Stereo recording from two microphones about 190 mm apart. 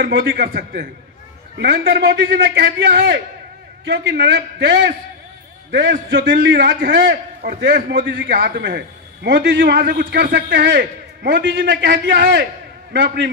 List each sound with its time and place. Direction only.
0.0 s a man's voice: 55° right (ahead or behind)
1.6 s a man's voice: 60° right (ahead or behind)
3.8 s a man's voice: 70° right (ahead or behind)
8.3 s a man's voice: 55° right (ahead or behind)